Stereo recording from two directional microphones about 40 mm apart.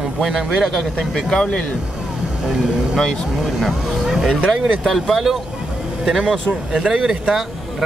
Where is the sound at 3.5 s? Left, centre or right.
Centre.